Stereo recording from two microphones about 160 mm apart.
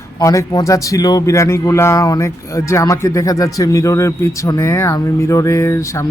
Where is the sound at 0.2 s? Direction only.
20° left (ahead or behind).